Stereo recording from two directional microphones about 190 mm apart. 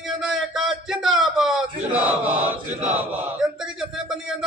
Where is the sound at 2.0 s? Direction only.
10° right (ahead or behind).